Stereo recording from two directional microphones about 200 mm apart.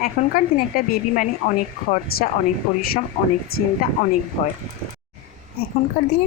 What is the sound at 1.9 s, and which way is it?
Speech, 50° left (ahead or behind).